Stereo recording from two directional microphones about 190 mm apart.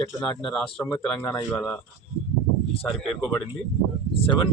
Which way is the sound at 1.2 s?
20° left (ahead or behind).